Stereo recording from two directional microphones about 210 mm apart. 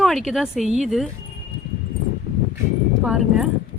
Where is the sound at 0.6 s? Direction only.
30° right (ahead or behind).